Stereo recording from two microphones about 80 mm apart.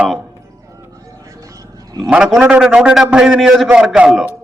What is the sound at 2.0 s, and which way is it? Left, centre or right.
A man's voice, centre.